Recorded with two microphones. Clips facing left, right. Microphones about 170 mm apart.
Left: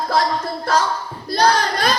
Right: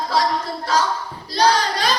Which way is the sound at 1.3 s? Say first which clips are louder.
Left 1 dB; 50° left (ahead or behind).